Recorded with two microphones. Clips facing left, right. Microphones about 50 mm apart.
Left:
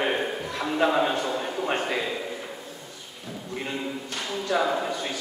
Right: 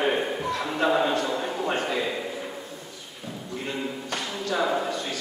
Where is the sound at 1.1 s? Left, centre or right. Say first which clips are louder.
Right 1 dB; centre.